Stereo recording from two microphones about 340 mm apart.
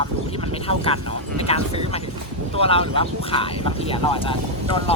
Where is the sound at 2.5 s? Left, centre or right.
Centre.